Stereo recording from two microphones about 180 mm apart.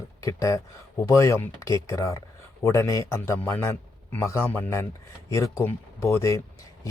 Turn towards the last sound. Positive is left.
turn(degrees=15)  # may be behind; listen again after turning